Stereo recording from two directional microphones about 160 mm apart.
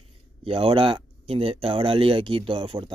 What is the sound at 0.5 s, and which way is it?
Speech, 35° right (ahead or behind).